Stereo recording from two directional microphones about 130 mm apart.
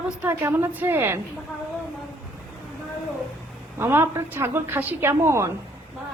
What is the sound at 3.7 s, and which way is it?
A woman's voice, 20° right (ahead or behind).